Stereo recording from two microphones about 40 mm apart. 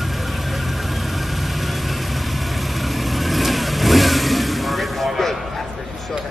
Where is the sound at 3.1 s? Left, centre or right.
Centre.